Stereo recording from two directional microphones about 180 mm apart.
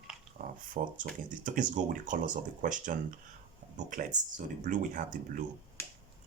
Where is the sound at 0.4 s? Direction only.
45° right (ahead or behind).